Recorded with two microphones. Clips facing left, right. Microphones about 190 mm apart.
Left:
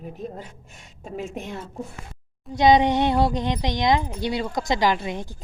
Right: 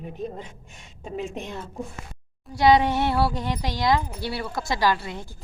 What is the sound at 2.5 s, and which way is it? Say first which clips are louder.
Speech: left 2 dB; 20° left (ahead or behind).